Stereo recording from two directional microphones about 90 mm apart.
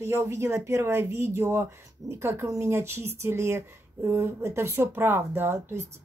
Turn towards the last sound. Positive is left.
turn(degrees=-25)  # may be behind; listen again after turning